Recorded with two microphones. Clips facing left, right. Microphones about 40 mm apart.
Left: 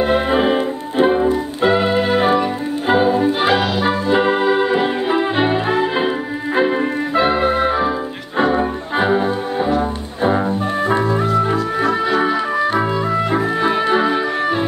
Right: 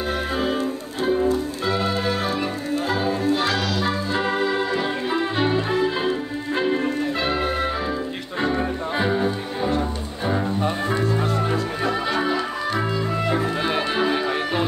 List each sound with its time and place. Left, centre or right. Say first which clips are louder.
0.0 s organ: left 9 dB; left
1.3 s music: left 7 dB; left
2.9 s organ: left 9 dB; left
8.4 s music: left 7 dB; left
11.8 s music: left 7 dB; centre